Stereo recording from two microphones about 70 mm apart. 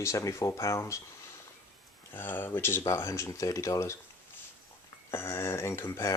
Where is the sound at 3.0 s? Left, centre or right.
Left.